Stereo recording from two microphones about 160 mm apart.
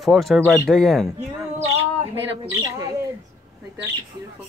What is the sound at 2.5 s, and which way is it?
Speech, 20° right (ahead or behind).